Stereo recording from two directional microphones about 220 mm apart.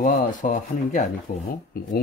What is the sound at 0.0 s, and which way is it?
Speech, 35° left (ahead or behind).